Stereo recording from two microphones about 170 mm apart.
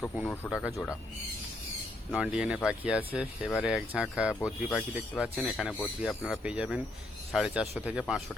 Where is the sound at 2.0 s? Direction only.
5° right (ahead or behind).